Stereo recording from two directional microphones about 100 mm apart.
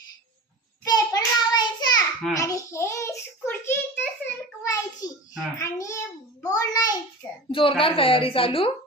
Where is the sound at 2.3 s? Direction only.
35° left (ahead or behind).